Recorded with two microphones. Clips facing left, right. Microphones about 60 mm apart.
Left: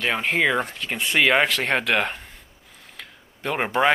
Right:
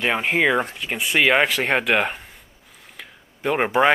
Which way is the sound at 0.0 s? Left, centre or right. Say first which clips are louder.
Right 2 dB; centre.